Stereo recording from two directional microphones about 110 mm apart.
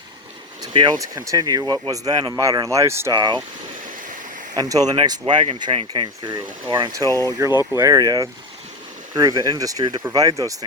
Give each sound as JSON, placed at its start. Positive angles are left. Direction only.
{"t": 0.7, "sound": "speech", "side_deg": -45}
{"t": 0.9, "sound": "speech", "side_deg": -30}
{"t": 2.3, "sound": "speech", "side_deg": -30}
{"t": 3.2, "sound": "speech", "side_deg": -40}
{"t": 4.5, "sound": "speech", "side_deg": -35}
{"t": 5.2, "sound": "speech", "side_deg": -50}
{"t": 7.3, "sound": "speech", "side_deg": -30}
{"t": 7.5, "sound": "speech", "side_deg": 35}
{"t": 7.8, "sound": "speech", "side_deg": -35}